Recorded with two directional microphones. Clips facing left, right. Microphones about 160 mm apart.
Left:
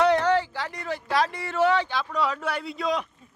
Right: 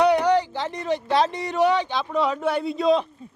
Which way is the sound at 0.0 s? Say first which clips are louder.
Right 2 dB; 15° right (ahead or behind).